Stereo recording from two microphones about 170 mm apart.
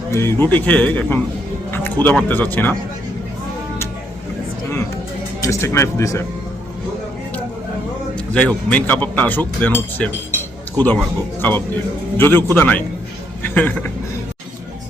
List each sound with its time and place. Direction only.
0.1 s speech: 15° left (ahead or behind)
5.4 s speech: 15° left (ahead or behind)
8.3 s speech: 5° left (ahead or behind)
10.3 s cutlery: 10° left (ahead or behind)
11.3 s speech: 10° left (ahead or behind)